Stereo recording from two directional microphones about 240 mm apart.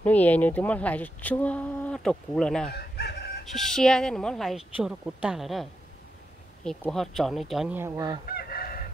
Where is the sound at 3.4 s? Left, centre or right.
Centre.